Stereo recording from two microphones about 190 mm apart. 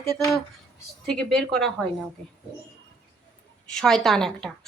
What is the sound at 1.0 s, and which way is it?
Speech, 5° left (ahead or behind).